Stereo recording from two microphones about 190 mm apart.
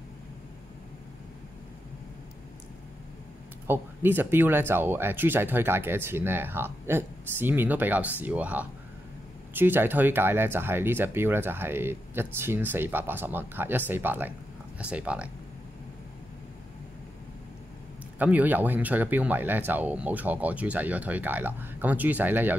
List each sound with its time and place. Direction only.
3.6 s speech: 10° right (ahead or behind)
18.2 s speech: 10° right (ahead or behind)